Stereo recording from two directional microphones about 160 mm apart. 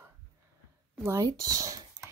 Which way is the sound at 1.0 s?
15° right (ahead or behind).